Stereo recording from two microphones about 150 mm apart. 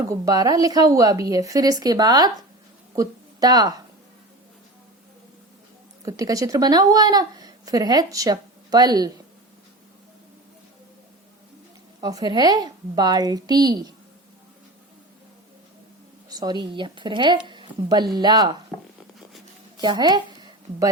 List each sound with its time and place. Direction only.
0.0 s a woman's voice: 20° right (ahead or behind)
6.1 s speech: 25° right (ahead or behind)
11.9 s speech: 25° right (ahead or behind)
16.3 s a woman's voice: 25° right (ahead or behind)
19.7 s a woman's voice: 30° right (ahead or behind)